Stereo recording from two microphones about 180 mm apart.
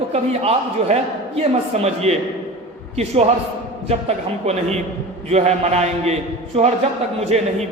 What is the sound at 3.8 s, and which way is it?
A man's voice, 35° right (ahead or behind).